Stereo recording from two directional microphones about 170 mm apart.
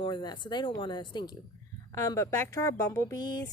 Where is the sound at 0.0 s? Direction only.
25° left (ahead or behind).